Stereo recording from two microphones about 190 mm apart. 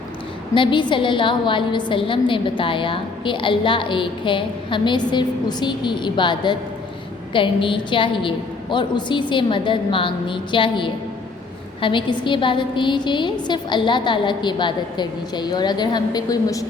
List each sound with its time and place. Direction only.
0.5 s a woman's voice: 25° left (ahead or behind)